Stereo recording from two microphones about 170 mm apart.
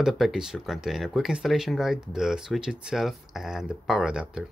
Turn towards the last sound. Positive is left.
turn(degrees=-5)  # may be behind; listen again after turning